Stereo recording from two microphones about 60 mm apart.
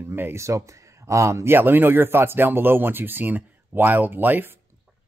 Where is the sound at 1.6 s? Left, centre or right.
Right.